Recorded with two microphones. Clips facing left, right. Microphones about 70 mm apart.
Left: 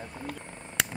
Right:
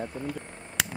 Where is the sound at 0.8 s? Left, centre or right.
Centre.